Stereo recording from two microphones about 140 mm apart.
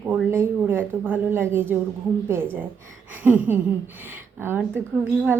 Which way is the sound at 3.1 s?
15° right (ahead or behind).